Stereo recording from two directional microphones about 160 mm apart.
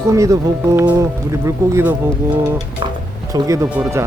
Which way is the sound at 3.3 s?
20° right (ahead or behind).